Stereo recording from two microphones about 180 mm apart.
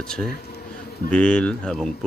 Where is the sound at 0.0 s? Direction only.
Centre (ahead or behind).